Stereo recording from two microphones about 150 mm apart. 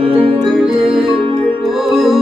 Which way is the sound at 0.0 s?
35° right (ahead or behind).